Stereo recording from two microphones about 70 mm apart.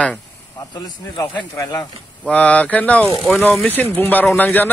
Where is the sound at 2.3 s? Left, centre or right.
Centre.